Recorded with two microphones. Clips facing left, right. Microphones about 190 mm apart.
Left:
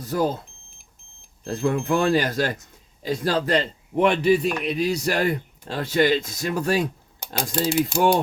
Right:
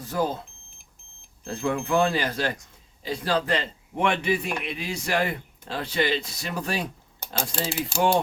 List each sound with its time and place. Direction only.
1.5 s a man's voice: 40° left (ahead or behind)
7.2 s speech: 15° left (ahead or behind)